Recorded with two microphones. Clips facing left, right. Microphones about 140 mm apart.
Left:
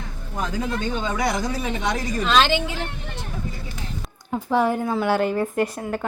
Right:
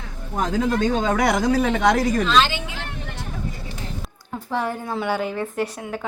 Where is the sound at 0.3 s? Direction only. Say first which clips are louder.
Right 5 dB; 90° right.